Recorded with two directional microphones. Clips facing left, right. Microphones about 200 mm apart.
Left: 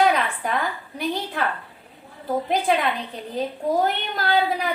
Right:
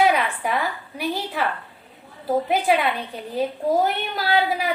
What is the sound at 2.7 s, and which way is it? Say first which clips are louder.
Speech: right 2 dB; 5° right (ahead or behind).